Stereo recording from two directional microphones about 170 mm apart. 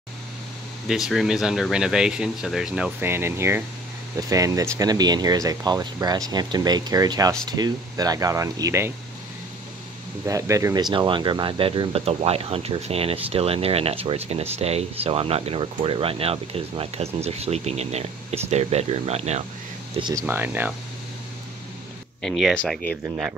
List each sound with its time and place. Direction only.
0.8 s speech: centre (ahead or behind); by 8.9 s 15° right (ahead or behind)
10.2 s speech: 20° right (ahead or behind); by 19.4 s 40° right (ahead or behind)
20.0 s speech: 25° right (ahead or behind)
20.2 s speech: 10° right (ahead or behind)
22.2 s speech: centre (ahead or behind)
23.0 s speech: 5° right (ahead or behind)